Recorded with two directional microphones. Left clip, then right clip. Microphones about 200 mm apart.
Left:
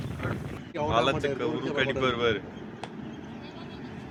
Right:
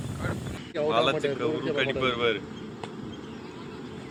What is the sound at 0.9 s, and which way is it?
Speech, 20° left (ahead or behind).